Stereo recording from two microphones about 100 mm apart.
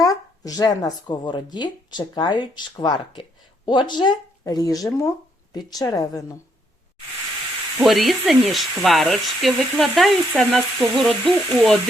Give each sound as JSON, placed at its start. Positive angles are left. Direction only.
{"t": 0.0, "sound": "speech", "side_deg": 40}
{"t": 7.8, "sound": "speech", "side_deg": 0}